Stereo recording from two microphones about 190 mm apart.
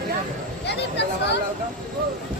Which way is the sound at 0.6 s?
65° left (ahead or behind).